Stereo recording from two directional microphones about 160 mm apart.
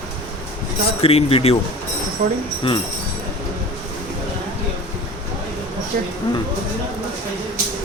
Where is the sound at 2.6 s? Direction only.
35° left (ahead or behind).